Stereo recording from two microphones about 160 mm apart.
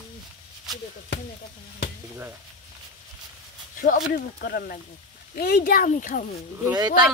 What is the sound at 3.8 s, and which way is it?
Speech, 75° left (ahead or behind).